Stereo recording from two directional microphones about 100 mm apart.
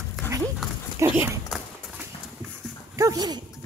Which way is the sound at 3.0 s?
35° right (ahead or behind).